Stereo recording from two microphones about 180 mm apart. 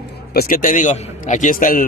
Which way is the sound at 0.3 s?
55° left (ahead or behind).